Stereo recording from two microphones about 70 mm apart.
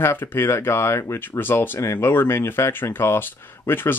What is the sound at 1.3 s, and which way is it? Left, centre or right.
Speech, left.